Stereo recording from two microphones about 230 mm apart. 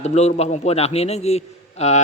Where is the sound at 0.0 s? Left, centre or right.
Left.